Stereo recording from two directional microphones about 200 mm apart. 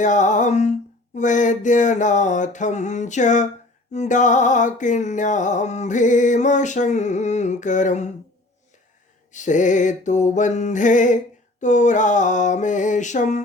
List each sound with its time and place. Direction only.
0.0 s music: 40° left (ahead or behind)
9.3 s music: 40° left (ahead or behind)